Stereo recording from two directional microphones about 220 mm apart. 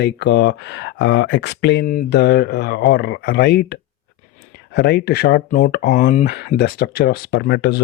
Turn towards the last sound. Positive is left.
turn(degrees=50)  # may be behind; listen again after turning